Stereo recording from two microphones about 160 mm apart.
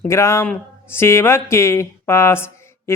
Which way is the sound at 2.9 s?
15° left (ahead or behind).